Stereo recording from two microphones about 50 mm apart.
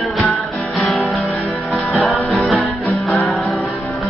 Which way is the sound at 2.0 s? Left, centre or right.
Centre.